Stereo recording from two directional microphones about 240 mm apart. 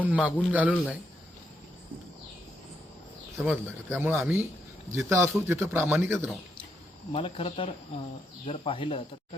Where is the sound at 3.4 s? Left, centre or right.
Centre.